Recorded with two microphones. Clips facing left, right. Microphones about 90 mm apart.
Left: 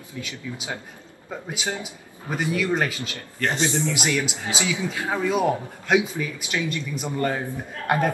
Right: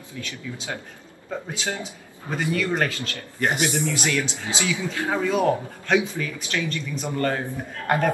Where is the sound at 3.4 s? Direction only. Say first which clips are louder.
Right 1 dB; 15° right (ahead or behind).